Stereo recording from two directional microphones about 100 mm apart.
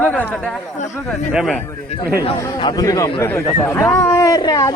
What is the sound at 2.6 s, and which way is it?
Speech, 45° left (ahead or behind).